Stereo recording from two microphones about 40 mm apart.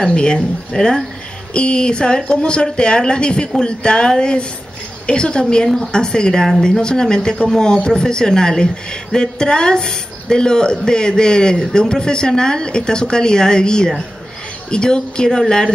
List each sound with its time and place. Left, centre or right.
0.0 s a woman's voice: left